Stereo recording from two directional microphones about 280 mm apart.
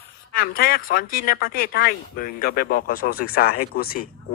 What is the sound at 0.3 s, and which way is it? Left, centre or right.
Speech, left.